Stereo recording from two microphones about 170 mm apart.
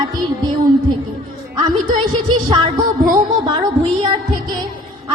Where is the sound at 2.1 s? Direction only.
25° right (ahead or behind).